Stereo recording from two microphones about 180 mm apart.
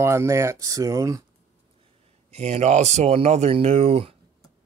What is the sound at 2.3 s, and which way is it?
Speech, 40° right (ahead or behind).